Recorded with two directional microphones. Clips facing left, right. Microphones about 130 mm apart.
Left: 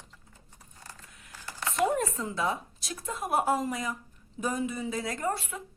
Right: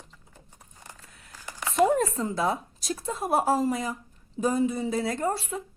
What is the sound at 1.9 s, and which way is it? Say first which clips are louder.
A woman's voice: right 4 dB; 35° right (ahead or behind).